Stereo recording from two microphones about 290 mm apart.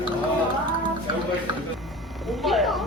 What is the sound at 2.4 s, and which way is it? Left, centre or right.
Speech, centre.